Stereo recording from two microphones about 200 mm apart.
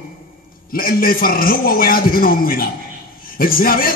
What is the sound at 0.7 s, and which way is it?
A man's voice, 45° left (ahead or behind).